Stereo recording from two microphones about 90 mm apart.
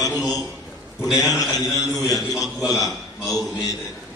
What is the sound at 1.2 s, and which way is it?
A man's voice, 40° left (ahead or behind).